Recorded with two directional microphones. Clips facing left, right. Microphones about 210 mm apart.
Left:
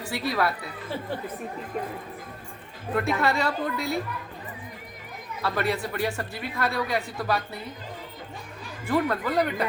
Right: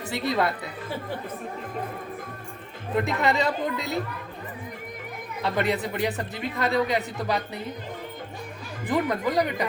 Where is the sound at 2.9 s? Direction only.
20° right (ahead or behind).